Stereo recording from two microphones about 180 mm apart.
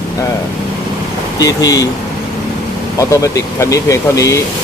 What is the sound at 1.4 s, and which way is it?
Speech, 20° left (ahead or behind).